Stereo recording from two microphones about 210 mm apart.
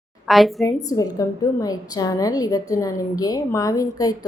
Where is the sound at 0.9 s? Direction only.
15° left (ahead or behind).